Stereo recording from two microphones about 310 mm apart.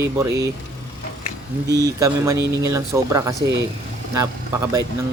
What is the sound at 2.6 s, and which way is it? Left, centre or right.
Speech, centre.